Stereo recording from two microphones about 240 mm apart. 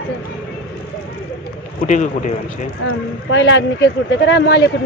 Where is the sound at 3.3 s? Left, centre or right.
Left.